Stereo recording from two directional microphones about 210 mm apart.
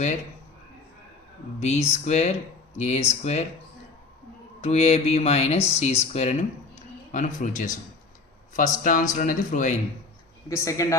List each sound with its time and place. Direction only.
1.5 s speech: 30° left (ahead or behind)
4.6 s speech: 30° left (ahead or behind)
10.5 s speech: 15° left (ahead or behind)